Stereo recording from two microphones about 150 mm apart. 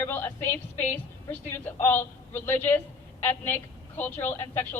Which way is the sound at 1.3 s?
15° left (ahead or behind).